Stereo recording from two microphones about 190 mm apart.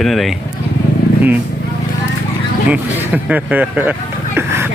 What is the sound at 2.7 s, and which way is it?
Speech, 10° right (ahead or behind).